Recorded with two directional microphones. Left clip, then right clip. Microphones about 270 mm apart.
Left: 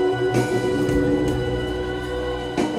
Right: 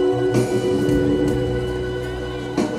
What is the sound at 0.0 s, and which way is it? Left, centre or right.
Music, centre.